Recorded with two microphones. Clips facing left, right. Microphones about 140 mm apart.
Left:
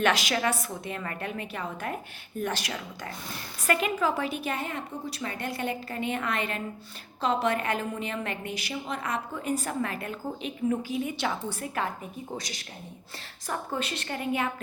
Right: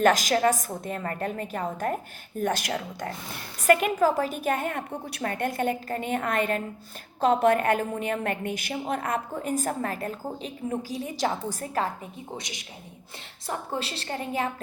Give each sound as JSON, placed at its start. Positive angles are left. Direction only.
{"t": 0.0, "sound": "a woman's voice", "side_deg": -45}
{"t": 12.4, "sound": "a woman's voice", "side_deg": -20}